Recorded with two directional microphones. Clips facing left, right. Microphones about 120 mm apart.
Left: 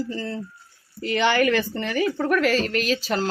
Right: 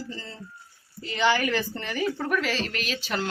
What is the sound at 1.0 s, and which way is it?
Speech, 65° left (ahead or behind).